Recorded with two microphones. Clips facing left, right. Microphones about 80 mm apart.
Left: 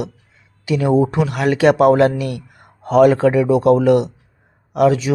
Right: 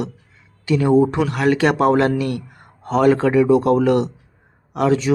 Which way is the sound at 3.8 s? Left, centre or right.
Centre.